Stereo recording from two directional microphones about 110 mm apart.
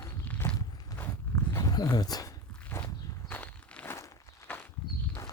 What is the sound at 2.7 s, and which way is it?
Walk, 20° left (ahead or behind).